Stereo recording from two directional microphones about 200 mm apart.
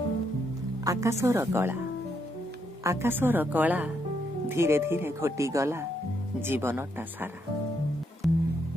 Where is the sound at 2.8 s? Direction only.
15° right (ahead or behind).